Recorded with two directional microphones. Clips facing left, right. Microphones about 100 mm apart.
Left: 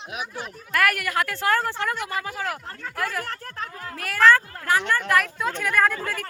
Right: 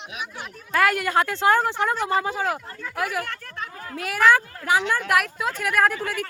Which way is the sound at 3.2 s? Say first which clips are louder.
Left 1 dB; 35° left (ahead or behind).